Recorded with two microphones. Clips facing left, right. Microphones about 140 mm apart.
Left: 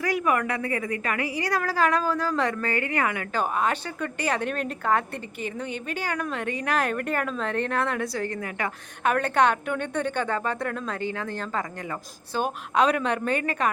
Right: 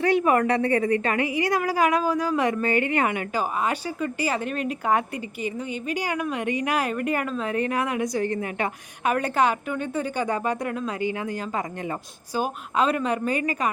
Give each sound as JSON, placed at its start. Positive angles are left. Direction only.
{"t": 0.0, "sound": "a woman's voice", "side_deg": -25}
{"t": 3.3, "sound": "a woman's voice", "side_deg": -5}
{"t": 9.0, "sound": "a woman's voice", "side_deg": -5}